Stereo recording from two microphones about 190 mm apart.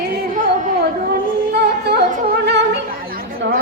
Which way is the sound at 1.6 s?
60° right (ahead or behind).